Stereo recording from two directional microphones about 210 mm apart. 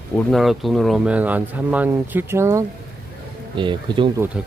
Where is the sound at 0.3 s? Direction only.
Centre (ahead or behind); by 4.1 s 25° right (ahead or behind).